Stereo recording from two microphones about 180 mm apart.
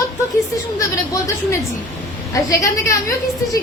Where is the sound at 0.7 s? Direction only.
20° left (ahead or behind).